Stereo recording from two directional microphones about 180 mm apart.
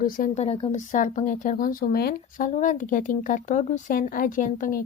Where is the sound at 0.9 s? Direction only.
45° left (ahead or behind).